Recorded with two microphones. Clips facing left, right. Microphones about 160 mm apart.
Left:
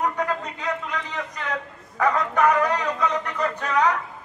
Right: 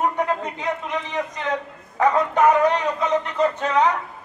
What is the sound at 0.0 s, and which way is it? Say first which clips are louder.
A man's voice: right 3 dB; 20° right (ahead or behind).